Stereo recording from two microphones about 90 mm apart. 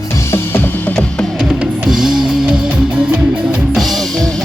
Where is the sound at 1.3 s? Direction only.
5° right (ahead or behind).